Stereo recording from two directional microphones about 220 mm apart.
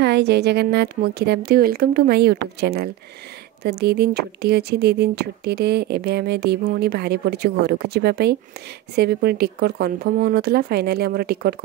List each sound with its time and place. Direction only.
0.0 s speech: 50° right (ahead or behind)